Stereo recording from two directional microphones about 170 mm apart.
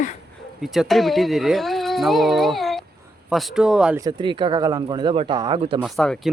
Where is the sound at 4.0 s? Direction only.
25° right (ahead or behind).